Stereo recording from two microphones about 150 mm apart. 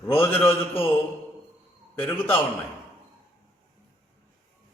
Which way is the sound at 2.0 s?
10° left (ahead or behind).